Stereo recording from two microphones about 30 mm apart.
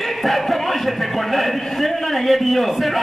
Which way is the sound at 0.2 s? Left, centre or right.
Centre.